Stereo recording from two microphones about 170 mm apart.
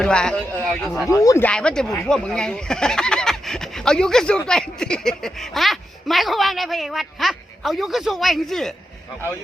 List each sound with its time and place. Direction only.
0.0 s speech: 5° left (ahead or behind)
1.1 s speech: 20° left (ahead or behind)
1.5 s speech: 5° left (ahead or behind)